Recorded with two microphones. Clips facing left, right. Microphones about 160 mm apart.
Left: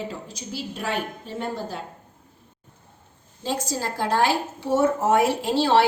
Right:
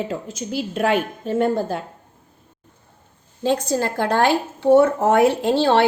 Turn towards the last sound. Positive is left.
turn(degrees=-55)  # may be behind; listen again after turning